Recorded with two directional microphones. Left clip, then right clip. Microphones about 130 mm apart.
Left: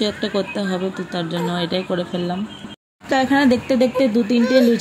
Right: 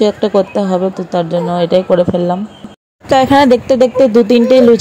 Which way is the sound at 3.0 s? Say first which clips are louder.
Right 9 dB; 65° right (ahead or behind).